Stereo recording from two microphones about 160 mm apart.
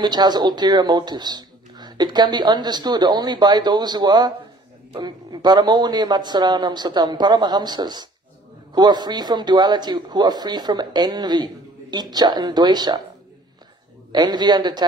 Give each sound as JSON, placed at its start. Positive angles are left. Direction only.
{"t": 0.0, "sound": "speech", "side_deg": -25}
{"t": 14.1, "sound": "speech", "side_deg": -25}